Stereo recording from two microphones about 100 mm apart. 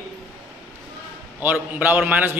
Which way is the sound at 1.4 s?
20° right (ahead or behind).